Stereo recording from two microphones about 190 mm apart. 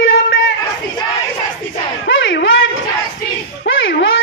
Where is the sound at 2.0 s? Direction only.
80° left.